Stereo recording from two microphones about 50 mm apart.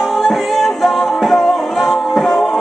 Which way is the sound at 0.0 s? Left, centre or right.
Centre.